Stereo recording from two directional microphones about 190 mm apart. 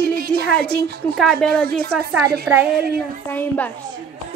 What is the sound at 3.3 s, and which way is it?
Speech, 10° left (ahead or behind).